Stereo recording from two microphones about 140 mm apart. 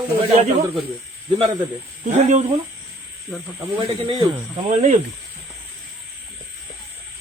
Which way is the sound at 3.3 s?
Centre (ahead or behind).